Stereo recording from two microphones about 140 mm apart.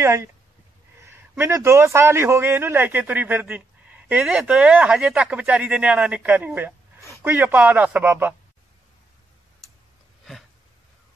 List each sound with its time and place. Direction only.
0.0 s speech: 20° right (ahead or behind)
1.4 s speech: 20° right (ahead or behind)